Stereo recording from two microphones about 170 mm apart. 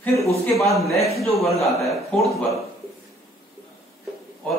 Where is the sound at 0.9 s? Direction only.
35° left (ahead or behind).